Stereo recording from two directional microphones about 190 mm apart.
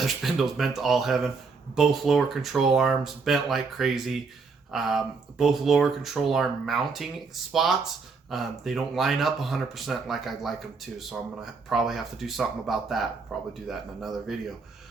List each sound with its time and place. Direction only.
0.0 s speech: centre (ahead or behind)